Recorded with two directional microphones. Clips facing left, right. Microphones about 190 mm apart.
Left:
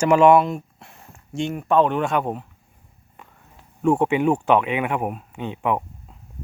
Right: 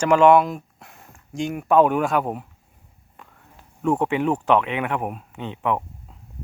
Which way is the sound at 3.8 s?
10° left (ahead or behind).